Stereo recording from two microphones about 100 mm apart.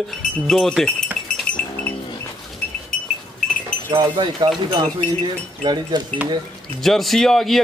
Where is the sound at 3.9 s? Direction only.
55° right (ahead or behind).